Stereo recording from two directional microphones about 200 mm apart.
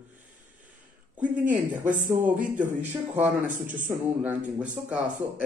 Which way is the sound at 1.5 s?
5° right (ahead or behind).